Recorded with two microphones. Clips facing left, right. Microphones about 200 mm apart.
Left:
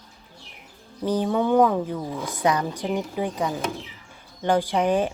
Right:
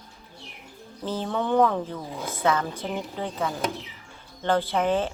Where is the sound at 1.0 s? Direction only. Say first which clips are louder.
Left 6 dB; 15° left (ahead or behind).